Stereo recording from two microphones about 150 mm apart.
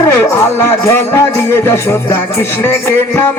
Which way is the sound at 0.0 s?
20° left (ahead or behind).